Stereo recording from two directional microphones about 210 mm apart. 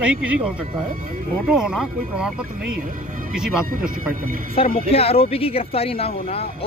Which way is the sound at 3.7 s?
40° right (ahead or behind).